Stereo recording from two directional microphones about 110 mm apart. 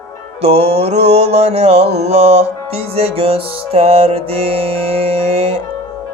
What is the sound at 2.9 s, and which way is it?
Music, 65° right (ahead or behind).